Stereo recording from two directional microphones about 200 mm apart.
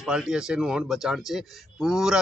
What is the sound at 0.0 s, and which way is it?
Speech, centre (ahead or behind).